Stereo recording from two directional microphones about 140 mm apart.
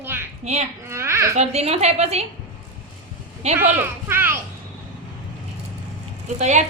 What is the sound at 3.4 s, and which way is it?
Speech, 50° right (ahead or behind).